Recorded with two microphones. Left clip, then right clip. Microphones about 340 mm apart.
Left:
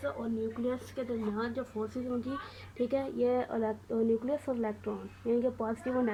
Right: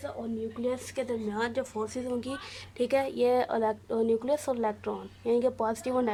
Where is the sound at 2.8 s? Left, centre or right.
Right.